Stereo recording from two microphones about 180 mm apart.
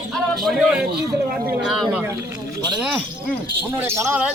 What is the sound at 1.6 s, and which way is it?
Speech, centre (ahead or behind).